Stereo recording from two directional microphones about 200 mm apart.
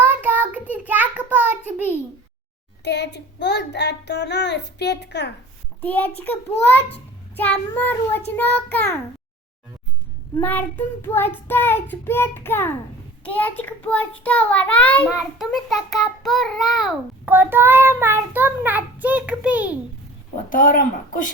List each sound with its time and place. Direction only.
0.1 s child singing: 10° right (ahead or behind)
0.7 s a sound: 10° right (ahead or behind)
2.8 s child singing: 60° left (ahead or behind)
5.8 s child singing: 10° left (ahead or behind)
10.3 s child singing: 10° left (ahead or behind)
17.3 s child singing: 10° right (ahead or behind)
20.5 s speech: 40° left (ahead or behind)